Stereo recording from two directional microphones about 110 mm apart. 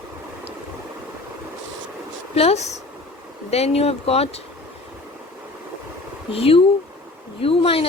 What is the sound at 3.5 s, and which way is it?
Speech, 70° left (ahead or behind).